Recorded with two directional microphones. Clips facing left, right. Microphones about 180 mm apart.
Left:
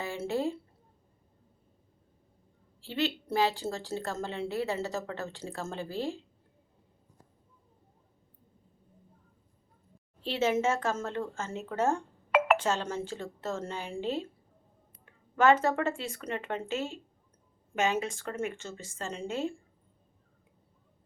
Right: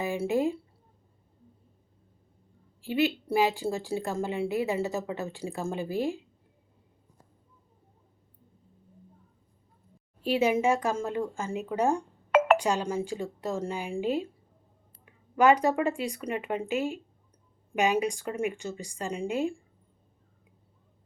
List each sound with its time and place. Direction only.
0.0 s speech: 15° right (ahead or behind)
2.8 s a woman's voice: 15° right (ahead or behind)
10.2 s a woman's voice: 15° right (ahead or behind)